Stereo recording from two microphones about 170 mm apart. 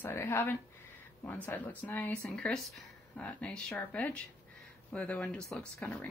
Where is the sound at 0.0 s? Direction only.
15° left (ahead or behind).